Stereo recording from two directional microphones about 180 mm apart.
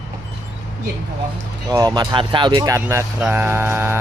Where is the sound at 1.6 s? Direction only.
20° right (ahead or behind).